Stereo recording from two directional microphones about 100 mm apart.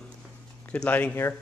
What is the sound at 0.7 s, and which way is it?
Speech, 15° left (ahead or behind).